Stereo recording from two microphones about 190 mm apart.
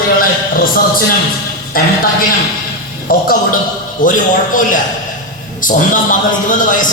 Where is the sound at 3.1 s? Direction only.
50° left (ahead or behind).